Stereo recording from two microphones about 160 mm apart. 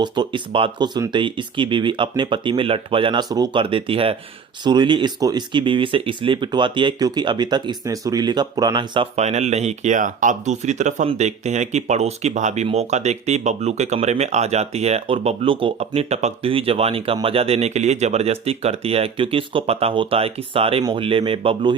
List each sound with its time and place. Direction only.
0.0 s speech: 30° right (ahead or behind)
9.1 s speech: 45° right (ahead or behind)